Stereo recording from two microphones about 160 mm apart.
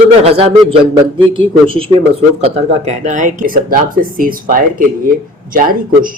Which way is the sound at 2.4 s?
40° right (ahead or behind).